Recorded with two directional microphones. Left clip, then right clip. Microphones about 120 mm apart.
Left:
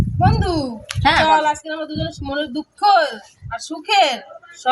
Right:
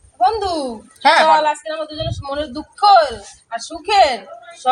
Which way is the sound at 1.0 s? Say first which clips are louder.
Right 2 dB; 15° right (ahead or behind).